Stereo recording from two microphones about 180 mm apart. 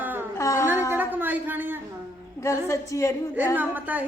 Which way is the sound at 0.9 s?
10° right (ahead or behind).